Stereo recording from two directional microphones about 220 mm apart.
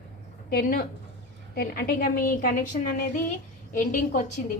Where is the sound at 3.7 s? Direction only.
35° left (ahead or behind).